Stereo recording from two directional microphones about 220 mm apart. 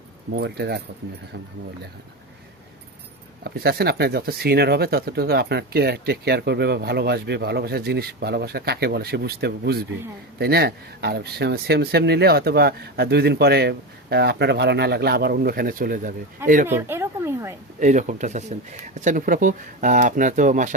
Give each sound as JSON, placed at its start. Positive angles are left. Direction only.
{"t": 0.3, "sound": "speech", "side_deg": -50}
{"t": 3.4, "sound": "speech", "side_deg": -45}
{"t": 16.6, "sound": "speech", "side_deg": -10}
{"t": 17.7, "sound": "speech", "side_deg": -35}